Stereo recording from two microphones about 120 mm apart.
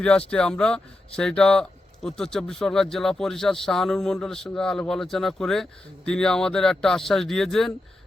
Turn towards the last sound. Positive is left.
turn(degrees=5)  # may be behind; listen again after turning